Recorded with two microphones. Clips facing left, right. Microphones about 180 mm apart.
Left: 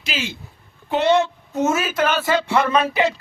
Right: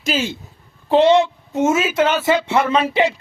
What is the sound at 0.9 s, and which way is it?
A woman's voice, 25° right (ahead or behind).